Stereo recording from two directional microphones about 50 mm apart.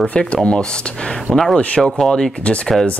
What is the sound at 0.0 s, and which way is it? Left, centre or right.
Speech, left.